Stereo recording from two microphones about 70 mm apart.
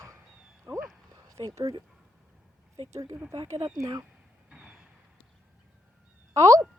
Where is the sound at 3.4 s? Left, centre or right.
Right.